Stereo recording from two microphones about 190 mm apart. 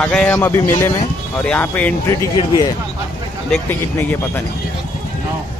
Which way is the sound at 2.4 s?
20° left (ahead or behind).